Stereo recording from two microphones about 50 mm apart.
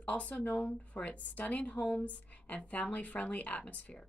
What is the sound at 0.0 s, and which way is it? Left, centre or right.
Speech, left.